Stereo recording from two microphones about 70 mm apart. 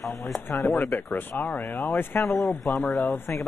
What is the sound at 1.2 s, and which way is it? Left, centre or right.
Speech, left.